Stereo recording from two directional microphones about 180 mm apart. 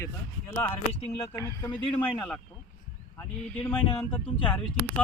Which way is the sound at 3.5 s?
10° left (ahead or behind).